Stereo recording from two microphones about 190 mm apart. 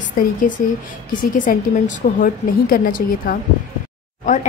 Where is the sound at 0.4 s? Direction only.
45° left (ahead or behind).